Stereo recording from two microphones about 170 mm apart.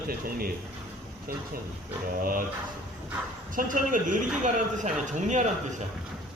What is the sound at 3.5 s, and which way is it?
Speech, 50° right (ahead or behind).